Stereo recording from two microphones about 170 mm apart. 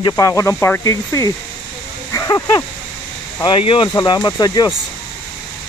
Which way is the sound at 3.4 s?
30° left (ahead or behind).